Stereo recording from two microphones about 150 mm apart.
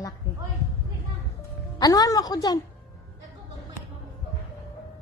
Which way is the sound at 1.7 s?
25° left (ahead or behind).